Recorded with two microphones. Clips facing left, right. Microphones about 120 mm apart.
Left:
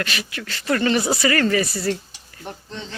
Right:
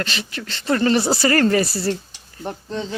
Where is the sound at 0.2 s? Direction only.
30° right (ahead or behind).